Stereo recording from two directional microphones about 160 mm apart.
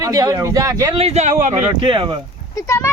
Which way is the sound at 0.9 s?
40° right (ahead or behind).